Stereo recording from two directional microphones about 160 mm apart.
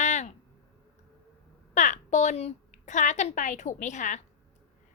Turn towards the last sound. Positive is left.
turn(degrees=50)  # may be behind; listen again after turning